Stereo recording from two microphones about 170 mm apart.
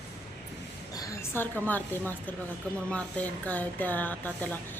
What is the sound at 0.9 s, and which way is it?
A woman's voice, 15° left (ahead or behind).